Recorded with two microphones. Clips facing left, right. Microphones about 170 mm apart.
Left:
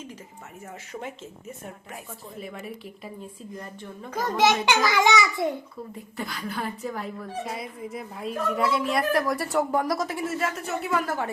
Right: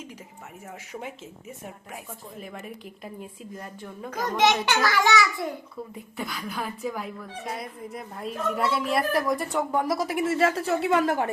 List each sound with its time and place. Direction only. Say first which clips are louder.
2.4 s speech: left 3 dB; centre (ahead or behind)
4.1 s a child's voice: left 1 dB; 5° left (ahead or behind); by 5.5 s 25° left (ahead or behind)
6.1 s speech: even; centre (ahead or behind)
10.2 s a woman's voice: right 6 dB; 30° right (ahead or behind)